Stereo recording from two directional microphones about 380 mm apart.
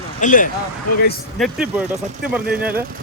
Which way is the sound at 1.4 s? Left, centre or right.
Centre.